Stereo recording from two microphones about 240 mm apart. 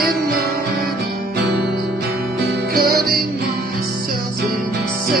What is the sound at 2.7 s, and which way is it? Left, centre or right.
Music, right.